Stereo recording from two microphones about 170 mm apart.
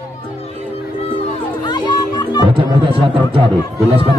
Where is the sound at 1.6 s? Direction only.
25° left (ahead or behind).